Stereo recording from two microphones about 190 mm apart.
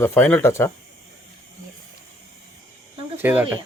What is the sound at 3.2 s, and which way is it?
Speech, 10° right (ahead or behind).